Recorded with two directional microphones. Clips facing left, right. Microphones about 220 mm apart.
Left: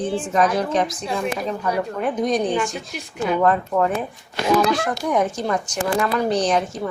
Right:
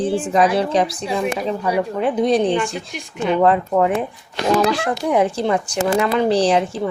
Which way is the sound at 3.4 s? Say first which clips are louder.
Right 4 dB; 25° right (ahead or behind).